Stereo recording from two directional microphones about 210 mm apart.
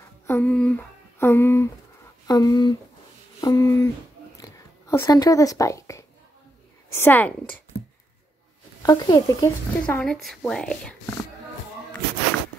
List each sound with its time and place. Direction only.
0.3 s speech: 10° left (ahead or behind)
4.4 s a sound: 15° left (ahead or behind)
6.9 s speech: 10° left (ahead or behind)
8.8 s speech: 20° left (ahead or behind)
9.9 s a woman's voice: centre (ahead or behind)